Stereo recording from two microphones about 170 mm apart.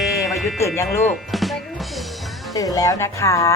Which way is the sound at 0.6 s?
15° left (ahead or behind).